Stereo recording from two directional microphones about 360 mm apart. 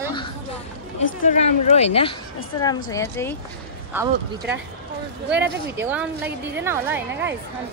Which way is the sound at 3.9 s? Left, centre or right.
Centre.